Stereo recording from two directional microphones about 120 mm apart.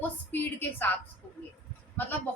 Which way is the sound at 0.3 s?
15° left (ahead or behind).